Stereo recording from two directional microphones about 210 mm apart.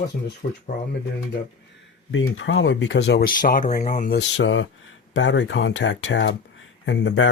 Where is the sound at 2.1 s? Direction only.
65° left (ahead or behind); by 4.1 s 40° left (ahead or behind).